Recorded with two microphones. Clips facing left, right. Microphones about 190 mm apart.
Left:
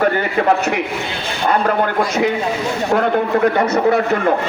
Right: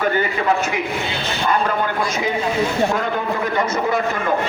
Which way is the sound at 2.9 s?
65° left (ahead or behind).